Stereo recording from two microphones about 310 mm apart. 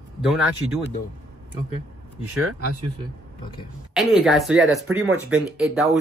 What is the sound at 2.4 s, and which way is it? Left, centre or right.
Speech, right.